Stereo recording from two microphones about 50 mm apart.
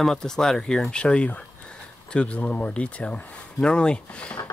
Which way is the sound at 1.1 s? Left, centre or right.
Left.